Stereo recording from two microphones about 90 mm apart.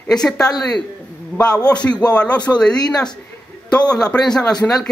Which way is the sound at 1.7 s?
10° left (ahead or behind).